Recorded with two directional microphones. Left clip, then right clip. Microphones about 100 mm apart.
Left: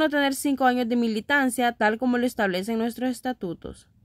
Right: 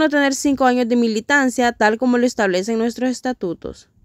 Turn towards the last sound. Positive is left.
turn(degrees=-30)  # may be behind; listen again after turning